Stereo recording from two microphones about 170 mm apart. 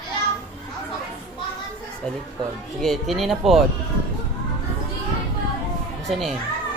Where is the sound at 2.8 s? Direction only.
Centre (ahead or behind).